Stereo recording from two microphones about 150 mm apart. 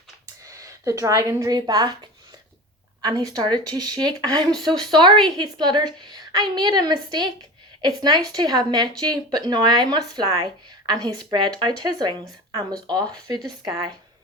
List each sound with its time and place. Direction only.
0.4 s a woman's voice: 20° right (ahead or behind)
3.0 s speech: 25° right (ahead or behind)
5.1 s a woman's voice: centre (ahead or behind)
5.4 s speech: 30° right (ahead or behind)